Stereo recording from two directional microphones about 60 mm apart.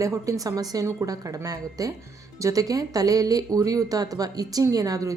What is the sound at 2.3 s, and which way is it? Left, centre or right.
Speech, right.